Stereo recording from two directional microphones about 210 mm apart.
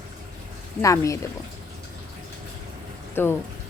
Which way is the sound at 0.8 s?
15° left (ahead or behind).